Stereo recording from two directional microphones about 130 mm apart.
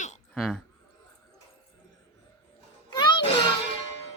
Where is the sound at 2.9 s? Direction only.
35° left (ahead or behind).